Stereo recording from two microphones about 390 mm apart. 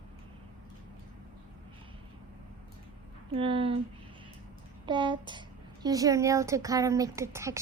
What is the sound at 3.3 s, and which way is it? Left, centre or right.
Speech, centre.